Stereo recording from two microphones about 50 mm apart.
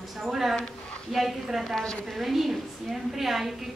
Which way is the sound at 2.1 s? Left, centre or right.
Centre.